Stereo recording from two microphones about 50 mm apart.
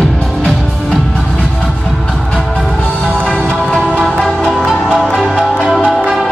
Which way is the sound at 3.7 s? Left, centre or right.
Left.